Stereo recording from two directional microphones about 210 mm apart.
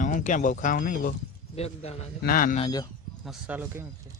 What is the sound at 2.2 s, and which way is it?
Speech, 45° left (ahead or behind).